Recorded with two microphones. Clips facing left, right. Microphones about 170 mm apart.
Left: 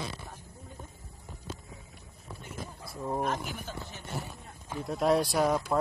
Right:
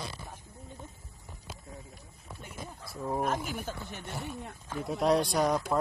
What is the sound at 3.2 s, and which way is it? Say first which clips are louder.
Speech: right 1 dB; 45° right (ahead or behind).